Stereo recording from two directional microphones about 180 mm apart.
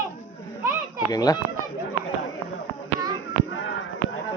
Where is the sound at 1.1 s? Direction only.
20° left (ahead or behind).